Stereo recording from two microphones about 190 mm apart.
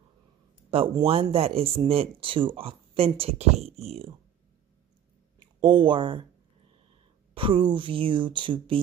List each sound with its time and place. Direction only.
0.7 s speech: 30° right (ahead or behind)
5.6 s speech: 25° right (ahead or behind)
7.3 s speech: 25° right (ahead or behind)